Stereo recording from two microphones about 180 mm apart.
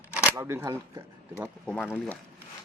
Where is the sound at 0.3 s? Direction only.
15° right (ahead or behind).